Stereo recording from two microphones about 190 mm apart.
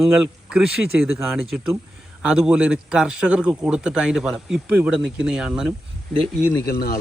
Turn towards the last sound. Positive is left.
turn(degrees=50)  # may be behind; listen again after turning